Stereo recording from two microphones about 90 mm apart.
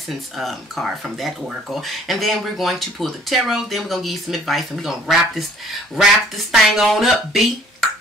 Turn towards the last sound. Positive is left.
turn(degrees=0)  # may be behind; listen again after turning